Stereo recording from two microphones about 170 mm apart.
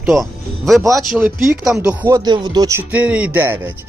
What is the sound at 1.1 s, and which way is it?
Speech, 5° right (ahead or behind).